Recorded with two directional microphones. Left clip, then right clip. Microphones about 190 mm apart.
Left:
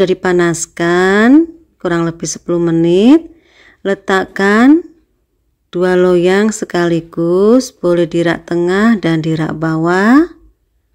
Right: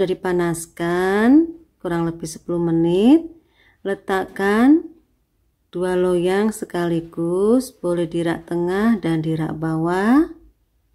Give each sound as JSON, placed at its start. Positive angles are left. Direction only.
{"t": 0.0, "sound": "speech", "side_deg": 20}